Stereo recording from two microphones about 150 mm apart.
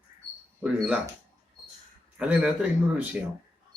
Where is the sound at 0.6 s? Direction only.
10° right (ahead or behind).